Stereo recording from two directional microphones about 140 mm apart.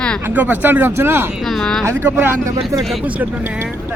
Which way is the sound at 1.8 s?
15° right (ahead or behind).